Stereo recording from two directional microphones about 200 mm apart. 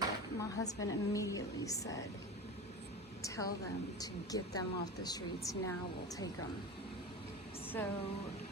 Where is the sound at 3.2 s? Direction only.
15° left (ahead or behind).